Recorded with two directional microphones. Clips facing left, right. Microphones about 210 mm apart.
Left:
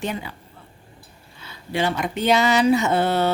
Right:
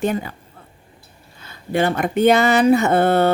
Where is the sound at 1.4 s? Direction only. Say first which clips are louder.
Right 5 dB; 50° right (ahead or behind).